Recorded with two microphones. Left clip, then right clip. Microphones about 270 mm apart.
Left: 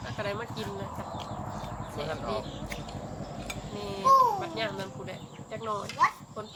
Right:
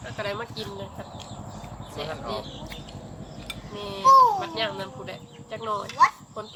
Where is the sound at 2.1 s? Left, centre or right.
Centre.